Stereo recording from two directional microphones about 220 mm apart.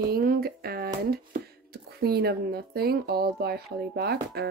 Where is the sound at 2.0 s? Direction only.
45° right (ahead or behind).